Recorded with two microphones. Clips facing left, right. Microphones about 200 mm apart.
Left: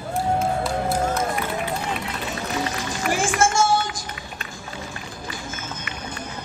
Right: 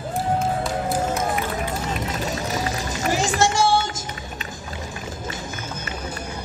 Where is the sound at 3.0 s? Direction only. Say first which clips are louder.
Even; 40° right (ahead or behind).